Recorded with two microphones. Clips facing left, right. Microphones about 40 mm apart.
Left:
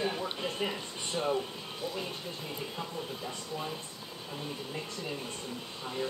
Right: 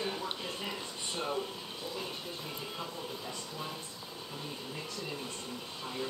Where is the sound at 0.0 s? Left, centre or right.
Centre.